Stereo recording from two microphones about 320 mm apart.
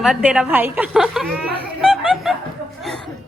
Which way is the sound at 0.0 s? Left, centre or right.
Centre.